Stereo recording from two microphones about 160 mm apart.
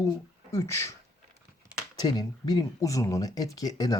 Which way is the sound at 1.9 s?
25° left (ahead or behind).